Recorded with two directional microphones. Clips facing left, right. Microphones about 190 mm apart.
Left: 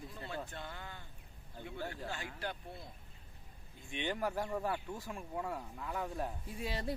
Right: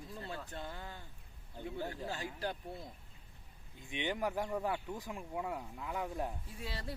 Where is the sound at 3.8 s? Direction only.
15° right (ahead or behind).